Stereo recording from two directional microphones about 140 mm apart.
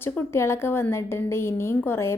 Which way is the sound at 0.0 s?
15° left (ahead or behind).